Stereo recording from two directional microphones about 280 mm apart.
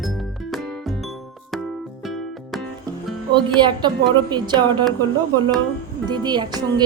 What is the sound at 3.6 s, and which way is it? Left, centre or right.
Music, centre.